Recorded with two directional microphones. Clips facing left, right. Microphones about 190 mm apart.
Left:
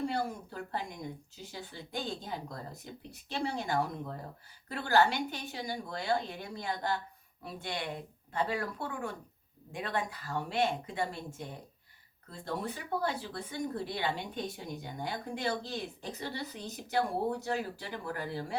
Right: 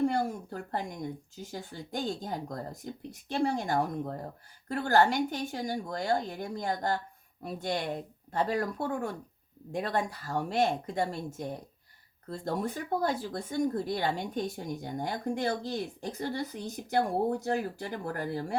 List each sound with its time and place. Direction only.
0.1 s speech: 45° right (ahead or behind)